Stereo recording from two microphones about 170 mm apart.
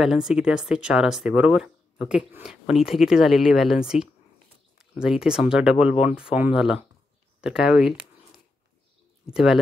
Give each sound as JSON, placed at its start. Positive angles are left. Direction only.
{"t": 0.0, "sound": "speech", "side_deg": 0}
{"t": 9.2, "sound": "speech", "side_deg": -5}